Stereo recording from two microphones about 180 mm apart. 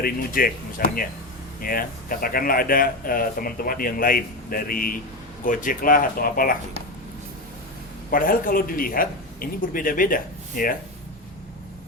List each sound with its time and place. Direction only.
0.0 s speech: 55° left (ahead or behind)
8.1 s speech: 50° left (ahead or behind)